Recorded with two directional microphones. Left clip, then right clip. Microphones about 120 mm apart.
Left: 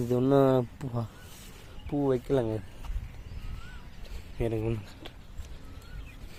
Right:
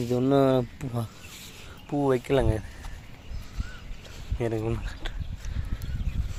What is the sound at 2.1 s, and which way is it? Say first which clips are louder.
Speech: right 4 dB; 20° left (ahead or behind).